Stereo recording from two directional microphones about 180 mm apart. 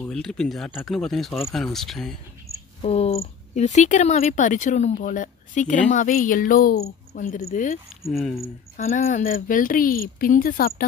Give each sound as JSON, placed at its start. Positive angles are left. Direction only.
{"t": 0.1, "sound": "speech", "side_deg": 5}
{"t": 2.8, "sound": "speech", "side_deg": 35}
{"t": 8.1, "sound": "speech", "side_deg": 0}
{"t": 8.7, "sound": "speech", "side_deg": 50}